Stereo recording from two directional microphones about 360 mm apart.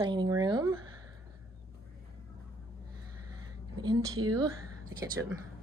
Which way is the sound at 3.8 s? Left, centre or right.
Centre.